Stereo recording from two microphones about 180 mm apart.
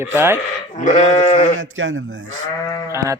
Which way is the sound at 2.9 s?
15° right (ahead or behind).